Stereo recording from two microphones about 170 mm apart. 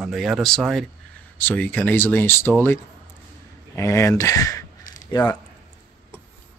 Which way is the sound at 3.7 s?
15° left (ahead or behind).